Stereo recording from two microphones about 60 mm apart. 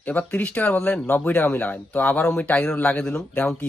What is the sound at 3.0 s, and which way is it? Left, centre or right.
Speech, centre.